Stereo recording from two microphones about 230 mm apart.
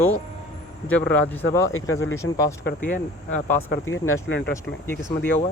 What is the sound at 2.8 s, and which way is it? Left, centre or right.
Speech, left.